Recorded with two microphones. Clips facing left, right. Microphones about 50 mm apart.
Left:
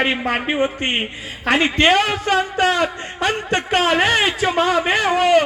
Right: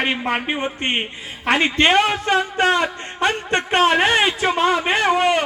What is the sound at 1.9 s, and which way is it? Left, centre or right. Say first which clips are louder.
A man's voice: even; centre.